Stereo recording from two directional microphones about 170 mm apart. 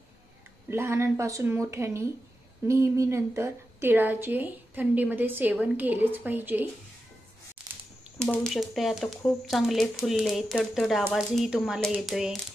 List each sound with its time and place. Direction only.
0.7 s a woman's voice: 15° right (ahead or behind)
8.2 s speech: 5° left (ahead or behind)